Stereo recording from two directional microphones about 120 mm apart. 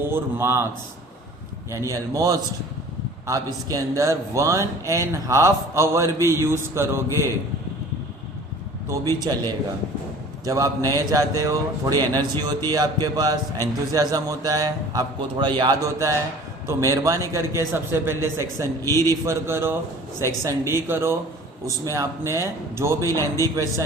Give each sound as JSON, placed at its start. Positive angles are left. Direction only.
{"t": 0.0, "sound": "speech", "side_deg": -20}
{"t": 1.7, "sound": "speech", "side_deg": -25}
{"t": 9.3, "sound": "a man's voice", "side_deg": -35}
{"t": 10.4, "sound": "a man's voice", "side_deg": -25}
{"t": 15.8, "sound": "speech", "side_deg": -30}
{"t": 18.8, "sound": "a man's voice", "side_deg": 25}
{"t": 19.2, "sound": "speech", "side_deg": -20}